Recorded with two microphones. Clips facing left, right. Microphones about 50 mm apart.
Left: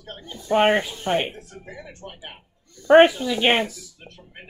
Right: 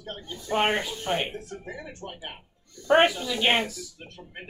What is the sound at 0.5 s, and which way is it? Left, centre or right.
Speech, left.